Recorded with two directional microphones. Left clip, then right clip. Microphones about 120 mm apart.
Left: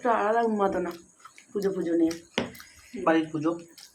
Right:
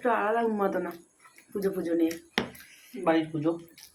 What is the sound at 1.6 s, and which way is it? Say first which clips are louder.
Speech: left 2 dB; 30° right (ahead or behind).